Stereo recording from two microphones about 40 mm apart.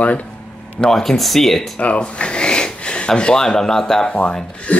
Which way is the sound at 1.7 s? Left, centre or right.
Left.